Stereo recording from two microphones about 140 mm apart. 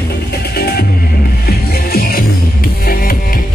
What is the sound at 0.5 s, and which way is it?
Music, 90° left.